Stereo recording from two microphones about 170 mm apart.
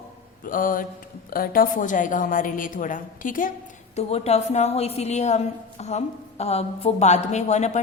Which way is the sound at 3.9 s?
40° left (ahead or behind).